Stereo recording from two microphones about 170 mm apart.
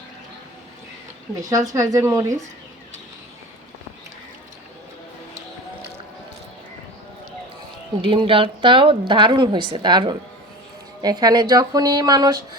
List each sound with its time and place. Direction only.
1.4 s speech: 20° right (ahead or behind)
8.0 s speech: 30° right (ahead or behind)